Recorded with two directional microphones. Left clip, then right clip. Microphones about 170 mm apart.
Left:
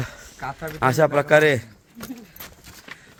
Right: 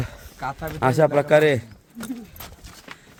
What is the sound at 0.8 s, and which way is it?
Speech, 10° right (ahead or behind).